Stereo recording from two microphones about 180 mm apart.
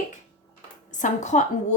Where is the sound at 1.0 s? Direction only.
45° left (ahead or behind).